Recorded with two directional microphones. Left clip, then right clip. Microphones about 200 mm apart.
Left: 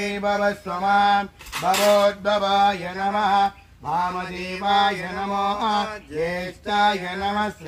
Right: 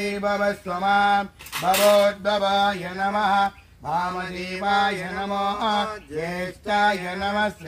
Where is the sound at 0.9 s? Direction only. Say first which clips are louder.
Left 2 dB; 10° right (ahead or behind).